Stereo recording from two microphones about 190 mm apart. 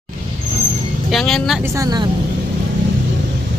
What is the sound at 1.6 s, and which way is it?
Speech, 15° right (ahead or behind).